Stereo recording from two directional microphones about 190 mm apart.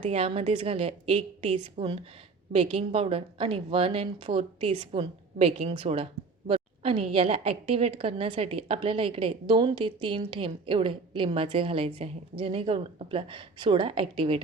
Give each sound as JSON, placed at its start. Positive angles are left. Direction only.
{"t": 0.0, "sound": "a woman's voice", "side_deg": -30}